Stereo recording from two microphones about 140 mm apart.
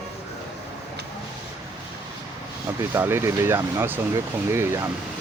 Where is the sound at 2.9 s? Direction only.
20° right (ahead or behind).